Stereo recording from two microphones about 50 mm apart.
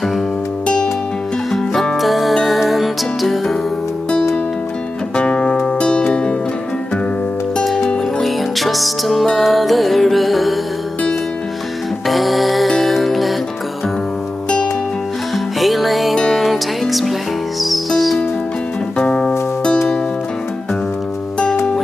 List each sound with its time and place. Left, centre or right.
1.5 s music: centre
5.1 s music: left
7.6 s music: centre
12.1 s music: centre
15.3 s music: centre
18.9 s music: centre